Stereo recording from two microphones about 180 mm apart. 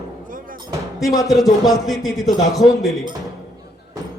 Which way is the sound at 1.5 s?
20° left (ahead or behind).